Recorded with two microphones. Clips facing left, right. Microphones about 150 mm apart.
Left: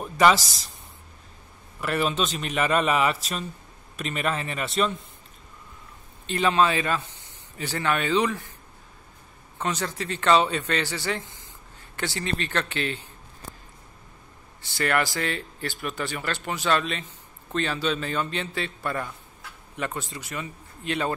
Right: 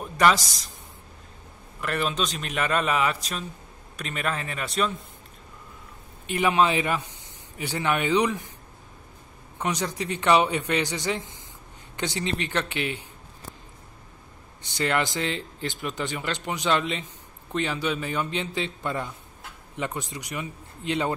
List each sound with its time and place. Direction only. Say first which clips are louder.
0.0 s a man's voice: left 2 dB; 5° left (ahead or behind)
1.8 s a man's voice: left 2 dB; 5° left (ahead or behind)
6.2 s a man's voice: even; 15° right (ahead or behind)
9.6 s a man's voice: right 1 dB; 15° right (ahead or behind)
14.6 s a man's voice: left 1 dB; 20° right (ahead or behind)